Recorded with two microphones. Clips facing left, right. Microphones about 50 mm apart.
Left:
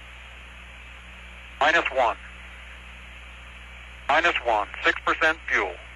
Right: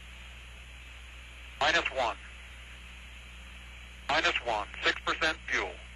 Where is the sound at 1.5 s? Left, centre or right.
Left.